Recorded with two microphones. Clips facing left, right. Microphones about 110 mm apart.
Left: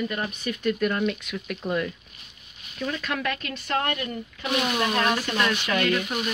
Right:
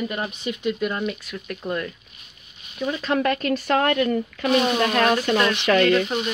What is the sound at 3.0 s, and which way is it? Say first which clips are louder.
Speech: right 7 dB; 35° right (ahead or behind).